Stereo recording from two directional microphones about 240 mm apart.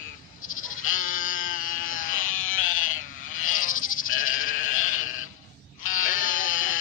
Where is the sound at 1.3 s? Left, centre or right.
Left.